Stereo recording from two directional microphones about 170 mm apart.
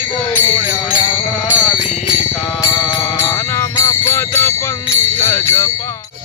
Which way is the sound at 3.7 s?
15° left (ahead or behind).